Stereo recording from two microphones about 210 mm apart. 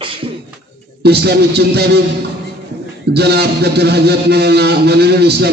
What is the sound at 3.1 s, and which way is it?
A man's voice, 50° right (ahead or behind).